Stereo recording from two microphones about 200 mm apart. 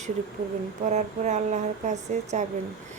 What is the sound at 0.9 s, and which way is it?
A woman's voice, 35° right (ahead or behind).